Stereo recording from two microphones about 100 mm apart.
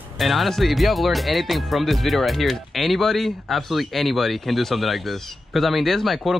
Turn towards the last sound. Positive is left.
turn(degrees=0)  # may be behind; listen again after turning